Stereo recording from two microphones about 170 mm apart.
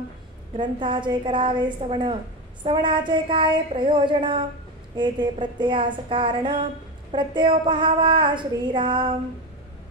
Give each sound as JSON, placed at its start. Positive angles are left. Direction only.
{"t": 0.6, "sound": "speech", "side_deg": -30}